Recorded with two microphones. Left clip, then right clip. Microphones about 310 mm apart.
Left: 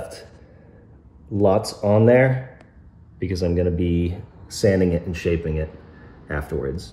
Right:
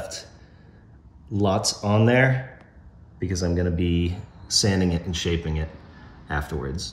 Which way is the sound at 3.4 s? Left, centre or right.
Centre.